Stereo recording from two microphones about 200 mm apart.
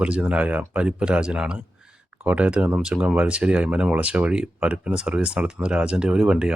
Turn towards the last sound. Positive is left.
turn(degrees=-5)  # may be behind; listen again after turning